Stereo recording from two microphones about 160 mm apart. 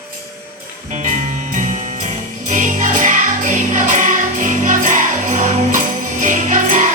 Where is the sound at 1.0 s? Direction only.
50° right (ahead or behind).